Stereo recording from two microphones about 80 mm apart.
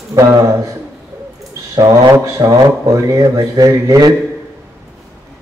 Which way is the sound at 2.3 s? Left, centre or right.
Right.